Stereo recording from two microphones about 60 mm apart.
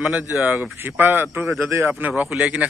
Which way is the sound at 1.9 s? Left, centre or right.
Right.